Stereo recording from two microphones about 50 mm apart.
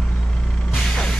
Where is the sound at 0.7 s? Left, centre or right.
Centre.